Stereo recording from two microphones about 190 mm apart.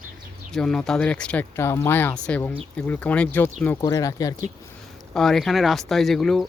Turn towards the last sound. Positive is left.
turn(degrees=0)  # may be behind; listen again after turning